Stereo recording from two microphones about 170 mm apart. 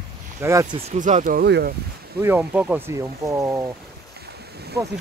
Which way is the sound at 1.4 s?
70° right (ahead or behind).